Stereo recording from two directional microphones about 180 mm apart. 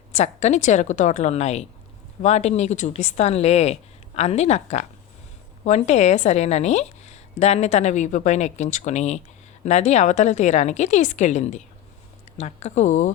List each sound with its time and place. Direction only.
0.1 s a woman's voice: 40° left (ahead or behind)